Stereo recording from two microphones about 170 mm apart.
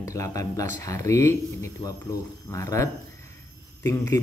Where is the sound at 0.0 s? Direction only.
20° left (ahead or behind).